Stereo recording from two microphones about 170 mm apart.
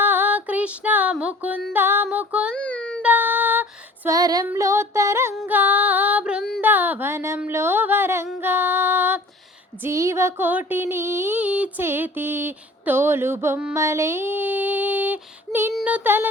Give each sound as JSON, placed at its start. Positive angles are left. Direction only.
{"t": 0.0, "sound": "music", "side_deg": -10}
{"t": 1.1, "sound": "child singing", "side_deg": -5}
{"t": 1.7, "sound": "music", "side_deg": -10}
{"t": 2.6, "sound": "child singing", "side_deg": 5}
{"t": 3.0, "sound": "female singing", "side_deg": -10}
{"t": 4.4, "sound": "child singing", "side_deg": -15}
{"t": 5.5, "sound": "female singing", "side_deg": -10}
{"t": 6.6, "sound": "a sound", "side_deg": -10}
{"t": 8.4, "sound": "music", "side_deg": -10}
{"t": 9.8, "sound": "child singing", "side_deg": -15}